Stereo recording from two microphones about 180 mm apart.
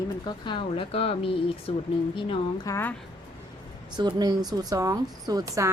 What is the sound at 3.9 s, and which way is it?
Speech, 25° right (ahead or behind).